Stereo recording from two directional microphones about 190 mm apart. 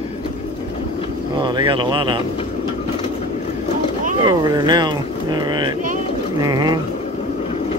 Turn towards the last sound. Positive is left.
turn(degrees=-20)  # may be behind; listen again after turning